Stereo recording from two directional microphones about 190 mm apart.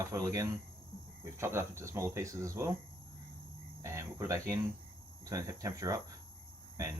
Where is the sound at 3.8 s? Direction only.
15° right (ahead or behind).